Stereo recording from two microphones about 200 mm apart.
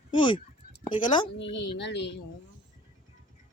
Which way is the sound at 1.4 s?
65° left (ahead or behind).